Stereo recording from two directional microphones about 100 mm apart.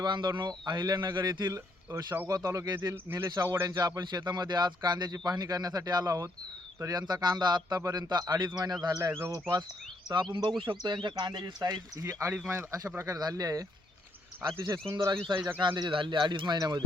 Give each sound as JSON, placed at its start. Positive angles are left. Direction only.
{"t": 0.0, "sound": "a man's voice", "side_deg": -50}
{"t": 1.5, "sound": "speech", "side_deg": -25}
{"t": 2.3, "sound": "speech", "side_deg": -35}
{"t": 2.9, "sound": "a man's voice", "side_deg": -20}
{"t": 10.1, "sound": "a man's voice", "side_deg": -50}
{"t": 12.0, "sound": "speech", "side_deg": -15}
{"t": 13.1, "sound": "speech", "side_deg": -40}
{"t": 15.4, "sound": "speech", "side_deg": -20}
{"t": 15.6, "sound": "speech", "side_deg": -40}
{"t": 15.9, "sound": "a man's voice", "side_deg": -60}